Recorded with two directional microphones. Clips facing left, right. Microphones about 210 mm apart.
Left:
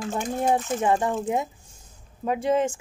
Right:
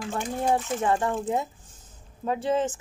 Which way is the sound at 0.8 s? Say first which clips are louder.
Left 2 dB; 15° left (ahead or behind).